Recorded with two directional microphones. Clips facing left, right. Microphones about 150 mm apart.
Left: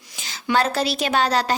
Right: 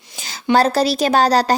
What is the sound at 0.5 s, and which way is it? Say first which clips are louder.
A woman's voice: right 6 dB; 35° right (ahead or behind).